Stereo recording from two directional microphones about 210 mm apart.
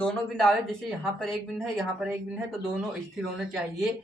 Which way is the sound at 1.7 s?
5° right (ahead or behind).